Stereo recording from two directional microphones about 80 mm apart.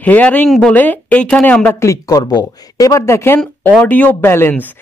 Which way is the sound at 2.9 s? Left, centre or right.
Left.